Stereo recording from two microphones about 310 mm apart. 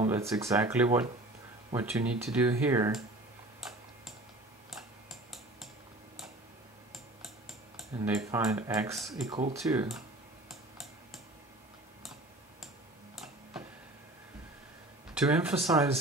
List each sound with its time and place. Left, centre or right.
0.0 s speech: centre
3.6 s tick-tock: centre
7.9 s speech: centre
9.3 s speech: centre
13.1 s tick-tock: centre
15.5 s speech: centre